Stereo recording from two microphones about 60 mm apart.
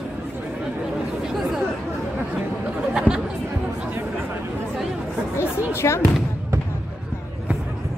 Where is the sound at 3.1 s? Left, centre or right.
Left.